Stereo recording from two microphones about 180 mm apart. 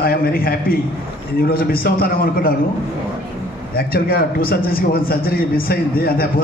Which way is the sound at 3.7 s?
55° left (ahead or behind).